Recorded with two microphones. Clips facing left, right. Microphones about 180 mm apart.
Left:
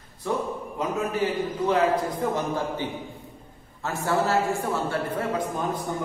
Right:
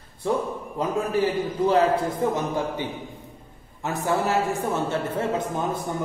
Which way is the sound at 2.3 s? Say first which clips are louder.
Right 1 dB; 15° right (ahead or behind).